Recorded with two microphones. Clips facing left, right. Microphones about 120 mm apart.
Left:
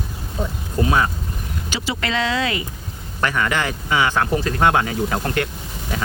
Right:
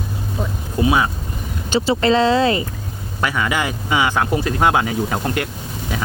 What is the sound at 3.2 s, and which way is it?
Speech, 10° right (ahead or behind).